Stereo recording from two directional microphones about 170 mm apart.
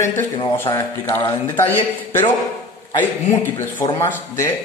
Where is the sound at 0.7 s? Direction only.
15° left (ahead or behind).